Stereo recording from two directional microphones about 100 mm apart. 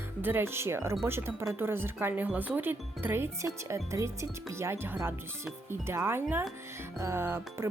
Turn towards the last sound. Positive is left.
turn(degrees=-25)  # may be behind; listen again after turning